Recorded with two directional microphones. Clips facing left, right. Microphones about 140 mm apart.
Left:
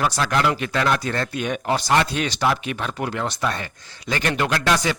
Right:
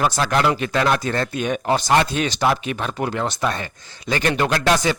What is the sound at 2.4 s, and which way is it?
A man's voice, 35° right (ahead or behind).